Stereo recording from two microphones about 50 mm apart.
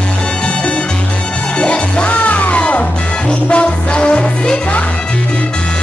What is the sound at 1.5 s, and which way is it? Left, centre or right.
Music, left.